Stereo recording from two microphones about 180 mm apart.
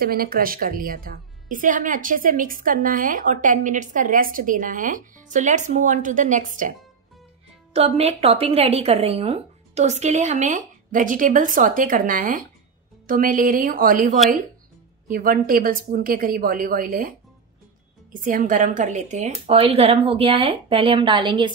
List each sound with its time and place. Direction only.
0.0 s a woman's voice: 55° right (ahead or behind)
8.0 s a woman's voice: 35° right (ahead or behind); by 17.1 s 50° right (ahead or behind)
18.1 s a woman's voice: 50° right (ahead or behind); by 21.5 s 25° right (ahead or behind)